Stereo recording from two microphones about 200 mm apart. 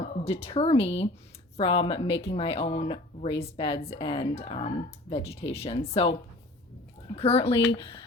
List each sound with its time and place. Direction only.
0.0 s speech: 30° left (ahead or behind)
7.2 s speech: 30° left (ahead or behind)